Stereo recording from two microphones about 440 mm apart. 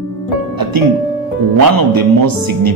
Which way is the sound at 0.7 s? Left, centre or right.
Right.